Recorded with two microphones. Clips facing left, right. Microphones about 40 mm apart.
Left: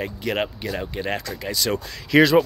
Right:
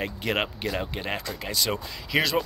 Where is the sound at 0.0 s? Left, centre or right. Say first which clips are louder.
Left 2 dB; right.